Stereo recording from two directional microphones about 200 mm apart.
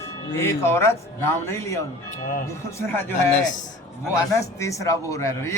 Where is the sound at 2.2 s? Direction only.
40° left (ahead or behind).